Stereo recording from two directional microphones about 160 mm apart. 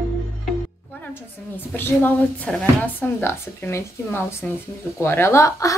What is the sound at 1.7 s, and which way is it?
A woman's voice, 10° left (ahead or behind).